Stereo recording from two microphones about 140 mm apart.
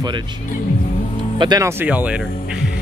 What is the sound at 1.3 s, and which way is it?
Speech, 30° right (ahead or behind).